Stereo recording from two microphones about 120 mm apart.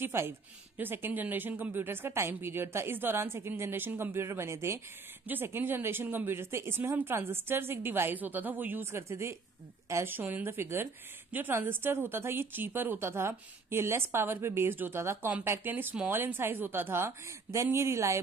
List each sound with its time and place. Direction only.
0.0 s a woman's voice: 20° right (ahead or behind)